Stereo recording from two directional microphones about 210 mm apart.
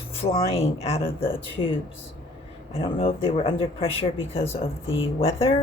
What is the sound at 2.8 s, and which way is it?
Speech, 25° left (ahead or behind).